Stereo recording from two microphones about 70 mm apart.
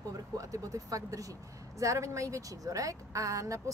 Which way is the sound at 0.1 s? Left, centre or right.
Right.